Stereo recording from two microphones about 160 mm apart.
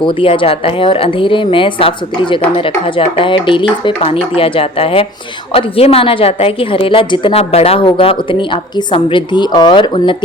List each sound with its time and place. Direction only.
0.2 s a woman's voice: 35° left (ahead or behind)